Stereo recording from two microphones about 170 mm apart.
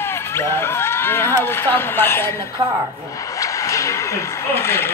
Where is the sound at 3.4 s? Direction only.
20° left (ahead or behind).